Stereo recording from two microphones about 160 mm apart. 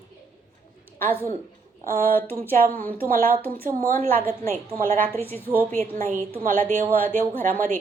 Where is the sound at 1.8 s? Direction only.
60° right (ahead or behind).